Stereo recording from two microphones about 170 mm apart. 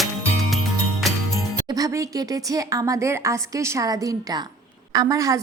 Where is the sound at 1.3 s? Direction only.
20° right (ahead or behind).